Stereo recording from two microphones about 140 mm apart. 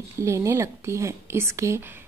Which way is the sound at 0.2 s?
20° right (ahead or behind).